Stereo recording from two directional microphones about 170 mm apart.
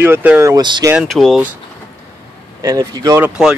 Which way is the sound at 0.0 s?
10° right (ahead or behind).